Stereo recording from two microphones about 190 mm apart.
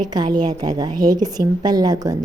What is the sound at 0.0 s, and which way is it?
A woman's voice, 20° right (ahead or behind).